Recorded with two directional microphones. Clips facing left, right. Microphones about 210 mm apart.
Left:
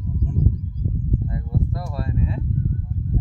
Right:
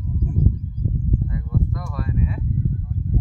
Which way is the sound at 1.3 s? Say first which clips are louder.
Even; 35° left (ahead or behind).